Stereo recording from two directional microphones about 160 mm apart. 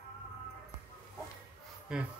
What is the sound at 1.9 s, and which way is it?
Speech, 5° right (ahead or behind).